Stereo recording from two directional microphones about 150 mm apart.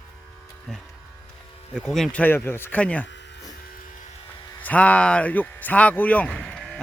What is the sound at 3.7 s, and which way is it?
Electric shaver, 65° left (ahead or behind).